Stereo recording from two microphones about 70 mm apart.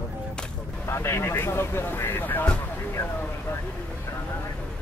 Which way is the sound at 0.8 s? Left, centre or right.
Left.